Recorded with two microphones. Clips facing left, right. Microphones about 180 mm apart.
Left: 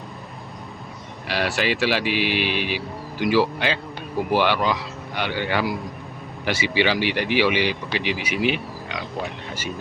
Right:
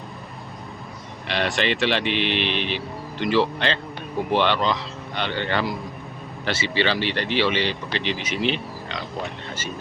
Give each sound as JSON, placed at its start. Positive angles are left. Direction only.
{"t": 1.3, "sound": "speech", "side_deg": 5}